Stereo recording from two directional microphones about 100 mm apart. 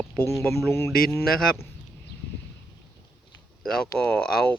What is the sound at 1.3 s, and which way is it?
Speech, 5° left (ahead or behind).